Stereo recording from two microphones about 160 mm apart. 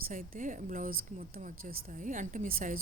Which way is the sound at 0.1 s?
55° right (ahead or behind).